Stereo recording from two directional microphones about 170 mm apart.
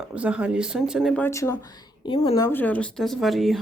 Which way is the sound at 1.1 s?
15° left (ahead or behind).